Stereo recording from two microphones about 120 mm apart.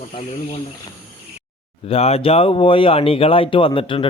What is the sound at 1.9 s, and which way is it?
Speech, 55° left (ahead or behind).